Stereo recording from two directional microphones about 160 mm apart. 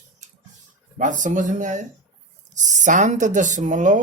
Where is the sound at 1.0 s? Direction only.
50° right (ahead or behind).